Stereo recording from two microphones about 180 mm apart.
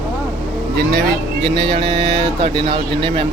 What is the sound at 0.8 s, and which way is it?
Speech, 60° right (ahead or behind).